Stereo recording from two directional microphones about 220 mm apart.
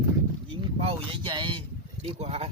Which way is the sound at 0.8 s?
25° right (ahead or behind).